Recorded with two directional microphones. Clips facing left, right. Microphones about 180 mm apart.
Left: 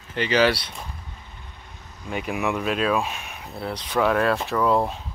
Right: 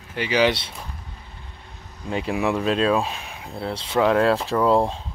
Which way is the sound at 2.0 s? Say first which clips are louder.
Right 3 dB; 30° right (ahead or behind).